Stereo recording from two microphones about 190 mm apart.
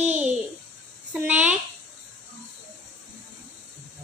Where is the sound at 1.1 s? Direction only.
10° right (ahead or behind).